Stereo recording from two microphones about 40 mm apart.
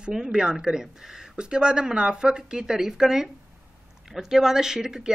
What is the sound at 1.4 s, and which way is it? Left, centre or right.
Speech, right.